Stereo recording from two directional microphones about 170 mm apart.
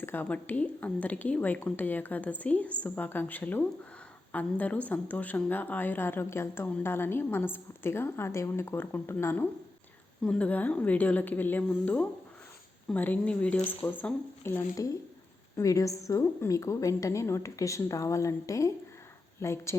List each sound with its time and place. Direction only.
0.0 s a woman's voice: 10° left (ahead or behind)